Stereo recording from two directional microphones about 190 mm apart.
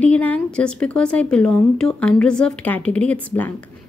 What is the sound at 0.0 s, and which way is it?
Speech, 10° left (ahead or behind).